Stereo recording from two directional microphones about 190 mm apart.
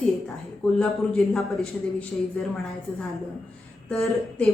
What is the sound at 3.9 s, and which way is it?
Speech, centre (ahead or behind).